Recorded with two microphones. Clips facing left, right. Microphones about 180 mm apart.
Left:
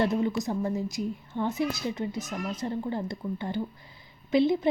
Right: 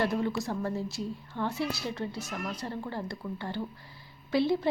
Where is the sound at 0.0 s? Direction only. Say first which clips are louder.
Left 3 dB; 20° left (ahead or behind).